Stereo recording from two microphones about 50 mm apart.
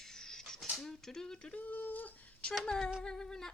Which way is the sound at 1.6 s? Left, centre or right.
Left.